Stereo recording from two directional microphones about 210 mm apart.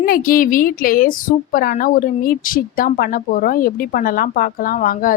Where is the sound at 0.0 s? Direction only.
45° left (ahead or behind).